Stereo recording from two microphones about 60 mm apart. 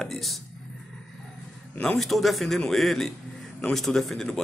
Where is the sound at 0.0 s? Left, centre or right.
Centre.